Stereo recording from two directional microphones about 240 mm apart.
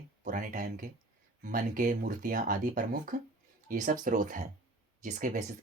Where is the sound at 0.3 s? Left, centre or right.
Right.